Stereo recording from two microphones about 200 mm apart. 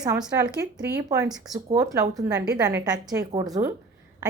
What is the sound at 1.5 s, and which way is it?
A woman's voice, 15° right (ahead or behind).